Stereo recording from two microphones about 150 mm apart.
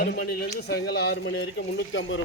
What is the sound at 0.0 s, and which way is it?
A man's voice, 90° left.